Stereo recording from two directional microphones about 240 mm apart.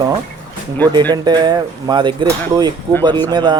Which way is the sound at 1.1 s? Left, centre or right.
Centre.